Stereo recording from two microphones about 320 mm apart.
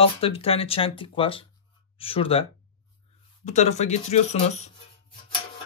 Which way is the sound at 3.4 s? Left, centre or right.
Left.